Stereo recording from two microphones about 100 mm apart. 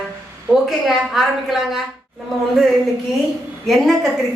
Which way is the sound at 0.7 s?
Centre (ahead or behind).